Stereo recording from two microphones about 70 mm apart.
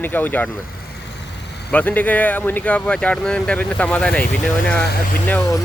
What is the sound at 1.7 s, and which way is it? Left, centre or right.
Speech, left.